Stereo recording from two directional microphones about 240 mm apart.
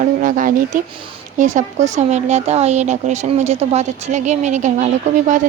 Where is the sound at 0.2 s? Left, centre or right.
Right.